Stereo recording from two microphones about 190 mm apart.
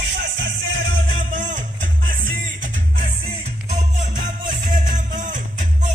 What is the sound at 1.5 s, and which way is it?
Music, 45° right (ahead or behind).